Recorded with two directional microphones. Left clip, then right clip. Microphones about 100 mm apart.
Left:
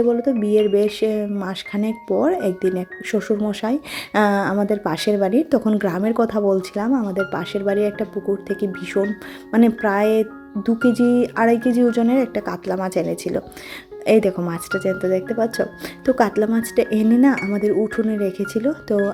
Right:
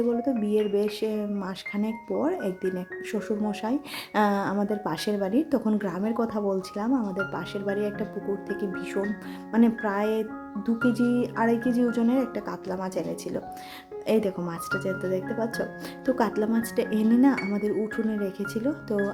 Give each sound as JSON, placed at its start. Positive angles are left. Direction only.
{"t": 0.1, "sound": "speech", "side_deg": 30}
{"t": 5.8, "sound": "speech", "side_deg": 40}